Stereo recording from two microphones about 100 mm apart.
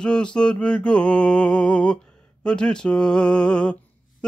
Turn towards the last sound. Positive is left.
turn(degrees=10)  # may be behind; listen again after turning